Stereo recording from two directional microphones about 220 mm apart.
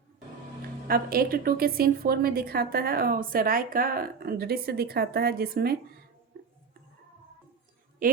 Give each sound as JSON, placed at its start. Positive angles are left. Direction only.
{"t": 0.9, "sound": "a woman's voice", "side_deg": -40}
{"t": 8.0, "sound": "a woman's voice", "side_deg": -40}